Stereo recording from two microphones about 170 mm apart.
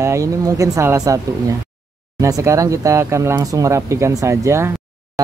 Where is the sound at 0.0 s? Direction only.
15° right (ahead or behind).